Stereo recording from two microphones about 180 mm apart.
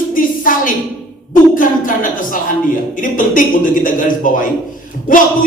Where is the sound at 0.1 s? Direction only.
50° left (ahead or behind).